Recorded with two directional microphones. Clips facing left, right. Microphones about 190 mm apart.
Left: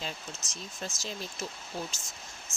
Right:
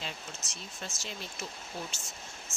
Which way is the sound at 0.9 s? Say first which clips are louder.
Left 3 dB; 40° left (ahead or behind).